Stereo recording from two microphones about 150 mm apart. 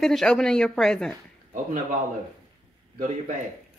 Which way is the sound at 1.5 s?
60° right (ahead or behind).